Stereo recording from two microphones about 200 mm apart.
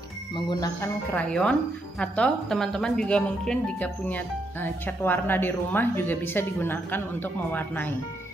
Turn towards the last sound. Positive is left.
turn(degrees=10)  # may be behind; listen again after turning